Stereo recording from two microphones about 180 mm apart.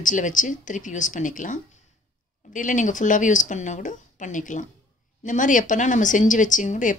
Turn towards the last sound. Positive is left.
turn(degrees=45)  # may be behind; listen again after turning